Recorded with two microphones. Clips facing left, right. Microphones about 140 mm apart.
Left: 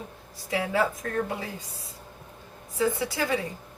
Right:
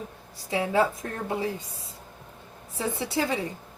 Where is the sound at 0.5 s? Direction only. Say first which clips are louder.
Right 2 dB; 25° right (ahead or behind).